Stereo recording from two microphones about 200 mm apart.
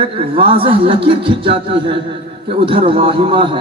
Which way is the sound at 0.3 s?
25° right (ahead or behind).